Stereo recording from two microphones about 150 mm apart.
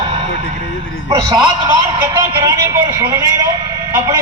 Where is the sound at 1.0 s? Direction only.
30° right (ahead or behind).